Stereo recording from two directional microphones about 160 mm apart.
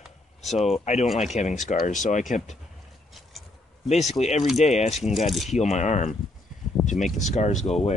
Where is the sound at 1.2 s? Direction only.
45° left (ahead or behind).